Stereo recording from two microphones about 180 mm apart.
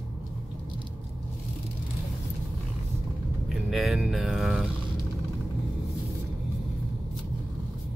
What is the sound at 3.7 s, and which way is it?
Speech, centre (ahead or behind).